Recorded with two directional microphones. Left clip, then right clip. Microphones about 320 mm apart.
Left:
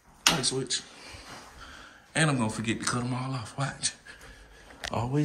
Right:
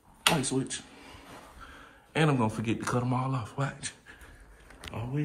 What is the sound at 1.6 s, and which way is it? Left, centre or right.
Speech, centre.